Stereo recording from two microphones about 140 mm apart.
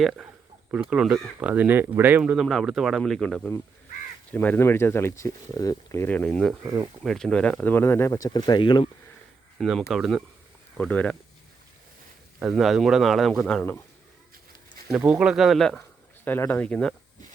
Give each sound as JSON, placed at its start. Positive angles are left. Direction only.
{"t": 0.0, "sound": "speech", "side_deg": 0}
{"t": 6.7, "sound": "speech", "side_deg": -15}
{"t": 7.0, "sound": "speech", "side_deg": 0}
{"t": 9.6, "sound": "speech", "side_deg": 0}
{"t": 12.4, "sound": "speech", "side_deg": -5}
{"t": 14.8, "sound": "speech", "side_deg": -10}
{"t": 16.2, "sound": "speech", "side_deg": 15}